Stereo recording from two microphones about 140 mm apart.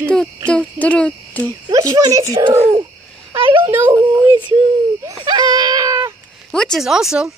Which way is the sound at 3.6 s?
15° right (ahead or behind).